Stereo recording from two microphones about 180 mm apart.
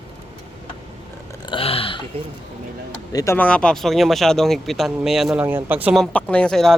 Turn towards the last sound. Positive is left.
turn(degrees=0)  # may be behind; listen again after turning